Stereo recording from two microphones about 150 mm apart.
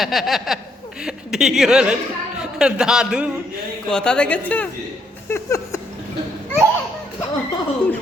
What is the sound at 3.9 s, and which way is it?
Speech, 5° left (ahead or behind).